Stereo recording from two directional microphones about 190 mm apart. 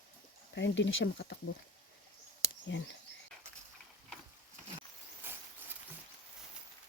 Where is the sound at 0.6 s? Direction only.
70° left (ahead or behind).